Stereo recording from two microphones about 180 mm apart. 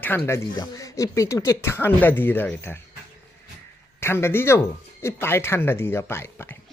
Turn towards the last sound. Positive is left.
turn(degrees=15)  # may be behind; listen again after turning